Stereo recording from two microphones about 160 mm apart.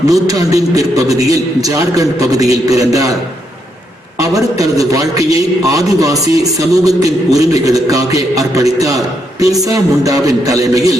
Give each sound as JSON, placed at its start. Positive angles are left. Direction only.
{"t": 0.0, "sound": "a man's voice", "side_deg": -20}
{"t": 4.2, "sound": "a man's voice", "side_deg": -20}